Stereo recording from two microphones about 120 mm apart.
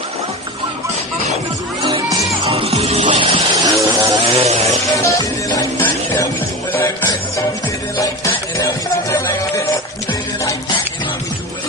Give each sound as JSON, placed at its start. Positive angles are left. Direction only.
{"t": 1.8, "sound": "music", "side_deg": -40}
{"t": 2.5, "sound": "music", "side_deg": -60}
{"t": 3.0, "sound": "music", "side_deg": -45}
{"t": 3.5, "sound": "vehicle", "side_deg": -30}
{"t": 4.3, "sound": "a sound", "side_deg": -55}
{"t": 5.0, "sound": "music", "side_deg": 30}
{"t": 5.8, "sound": "music", "side_deg": 20}
{"t": 8.3, "sound": "music", "side_deg": 20}